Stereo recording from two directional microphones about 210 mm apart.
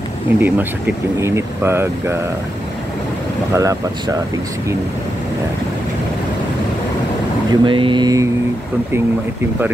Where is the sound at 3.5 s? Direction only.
15° right (ahead or behind).